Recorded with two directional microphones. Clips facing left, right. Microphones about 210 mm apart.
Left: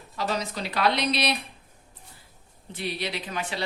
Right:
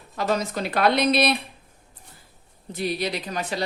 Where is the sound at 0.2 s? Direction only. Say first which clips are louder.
Right 5 dB; 50° right (ahead or behind).